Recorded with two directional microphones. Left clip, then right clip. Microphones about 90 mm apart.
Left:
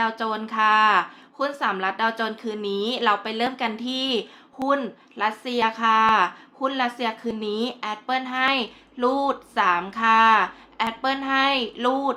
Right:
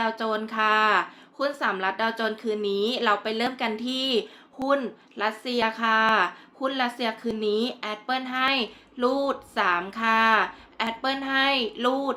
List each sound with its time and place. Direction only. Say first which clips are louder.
0.0 s speech: left 2 dB; 30° left (ahead or behind)